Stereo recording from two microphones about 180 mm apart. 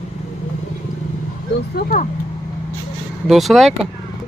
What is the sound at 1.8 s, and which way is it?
Speech, 55° left (ahead or behind).